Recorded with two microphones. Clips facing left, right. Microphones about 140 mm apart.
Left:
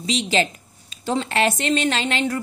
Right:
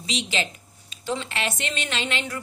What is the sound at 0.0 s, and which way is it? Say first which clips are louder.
A woman's voice: left 7 dB; 40° left (ahead or behind).